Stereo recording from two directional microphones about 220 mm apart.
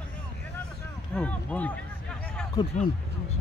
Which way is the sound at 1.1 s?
5° left (ahead or behind).